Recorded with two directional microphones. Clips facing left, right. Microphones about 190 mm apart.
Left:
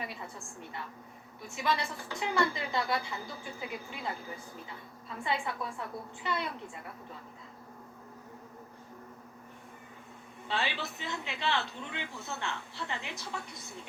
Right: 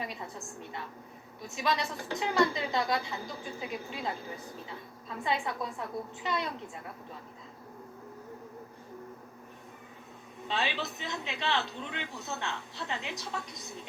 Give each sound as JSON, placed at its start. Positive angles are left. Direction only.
{"t": 0.0, "sound": "a woman's voice", "side_deg": -20}
{"t": 5.2, "sound": "a woman's voice", "side_deg": -20}
{"t": 10.5, "sound": "a woman's voice", "side_deg": -20}